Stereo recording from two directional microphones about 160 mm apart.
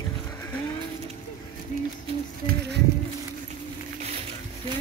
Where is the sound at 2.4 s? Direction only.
90° right.